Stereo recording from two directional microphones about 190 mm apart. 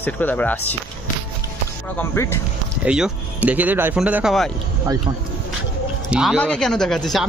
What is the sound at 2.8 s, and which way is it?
Speech, 5° right (ahead or behind).